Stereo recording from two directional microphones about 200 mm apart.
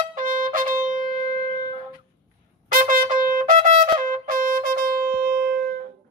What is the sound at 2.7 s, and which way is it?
Trumpet, 45° right (ahead or behind).